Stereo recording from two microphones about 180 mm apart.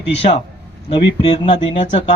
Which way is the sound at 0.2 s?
35° left (ahead or behind).